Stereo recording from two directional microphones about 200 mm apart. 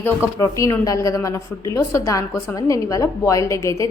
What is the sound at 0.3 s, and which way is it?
A woman's voice, 15° left (ahead or behind).